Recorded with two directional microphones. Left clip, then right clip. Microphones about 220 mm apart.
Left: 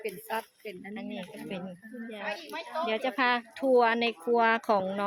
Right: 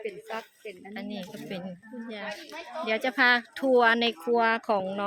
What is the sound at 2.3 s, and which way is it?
Speech, 35° left (ahead or behind).